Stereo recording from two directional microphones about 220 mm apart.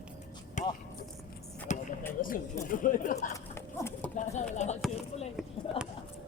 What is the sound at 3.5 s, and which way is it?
Horse, 10° left (ahead or behind).